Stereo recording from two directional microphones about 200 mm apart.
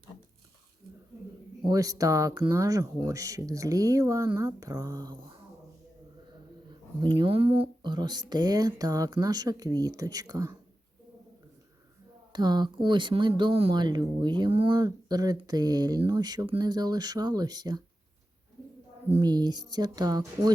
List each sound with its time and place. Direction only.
1.6 s speech: 15° right (ahead or behind)
7.0 s speech: 25° right (ahead or behind)
12.3 s speech: 20° right (ahead or behind)
19.1 s speech: 20° right (ahead or behind)